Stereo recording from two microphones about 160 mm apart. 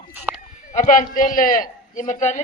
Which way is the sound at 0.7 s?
50° left (ahead or behind).